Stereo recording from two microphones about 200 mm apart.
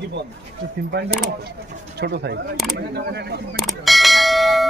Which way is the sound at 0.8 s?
55° right (ahead or behind).